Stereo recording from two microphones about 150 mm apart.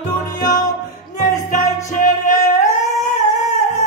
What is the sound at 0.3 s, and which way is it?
Music, 25° left (ahead or behind).